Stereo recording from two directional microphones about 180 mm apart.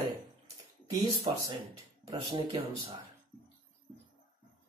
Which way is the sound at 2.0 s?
25° right (ahead or behind).